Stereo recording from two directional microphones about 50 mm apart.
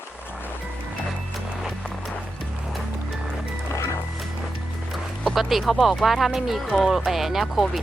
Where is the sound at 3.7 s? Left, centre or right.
Left.